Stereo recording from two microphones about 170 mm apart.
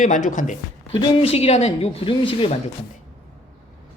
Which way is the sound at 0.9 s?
35° left (ahead or behind).